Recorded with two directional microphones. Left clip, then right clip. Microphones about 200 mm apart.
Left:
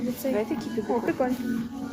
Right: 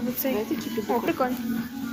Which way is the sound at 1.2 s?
20° left (ahead or behind).